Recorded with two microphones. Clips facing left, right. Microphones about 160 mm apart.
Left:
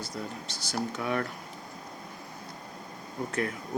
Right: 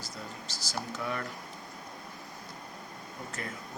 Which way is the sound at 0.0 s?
60° left (ahead or behind).